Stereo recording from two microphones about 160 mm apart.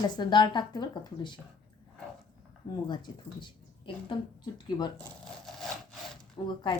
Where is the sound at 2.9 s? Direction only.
30° left (ahead or behind).